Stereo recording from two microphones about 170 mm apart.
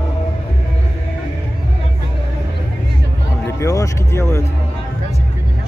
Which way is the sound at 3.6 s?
20° left (ahead or behind).